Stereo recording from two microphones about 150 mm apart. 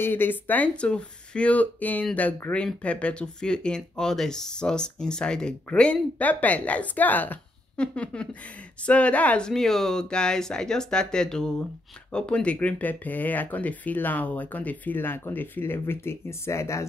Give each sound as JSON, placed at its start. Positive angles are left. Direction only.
{"t": 0.0, "sound": "speech", "side_deg": 15}